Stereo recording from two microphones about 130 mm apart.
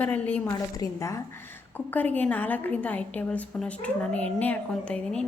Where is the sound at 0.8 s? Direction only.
25° left (ahead or behind).